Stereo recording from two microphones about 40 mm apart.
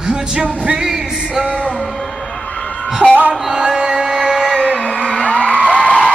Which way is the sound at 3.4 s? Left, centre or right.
Centre.